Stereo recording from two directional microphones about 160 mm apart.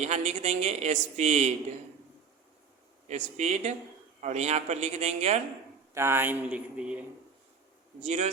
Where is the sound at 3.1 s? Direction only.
45° right (ahead or behind).